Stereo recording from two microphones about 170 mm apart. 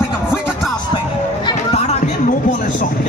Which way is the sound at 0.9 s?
30° left (ahead or behind).